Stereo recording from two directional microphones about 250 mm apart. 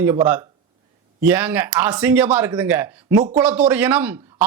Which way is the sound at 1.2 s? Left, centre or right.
Centre.